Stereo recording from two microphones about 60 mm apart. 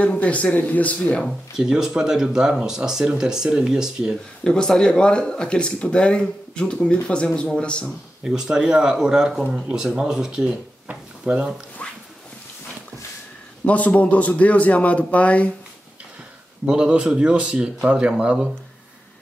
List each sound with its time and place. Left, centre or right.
0.0 s a man's voice: left
1.6 s speech: centre
4.5 s speech: centre
8.2 s speech: centre
11.8 s a sound: left
13.7 s a man's voice: left
16.6 s speech: centre